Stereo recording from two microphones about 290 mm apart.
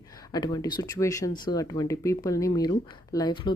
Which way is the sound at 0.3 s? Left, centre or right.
Centre.